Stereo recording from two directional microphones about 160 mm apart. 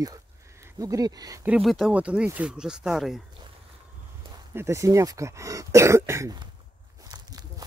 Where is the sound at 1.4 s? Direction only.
5° right (ahead or behind).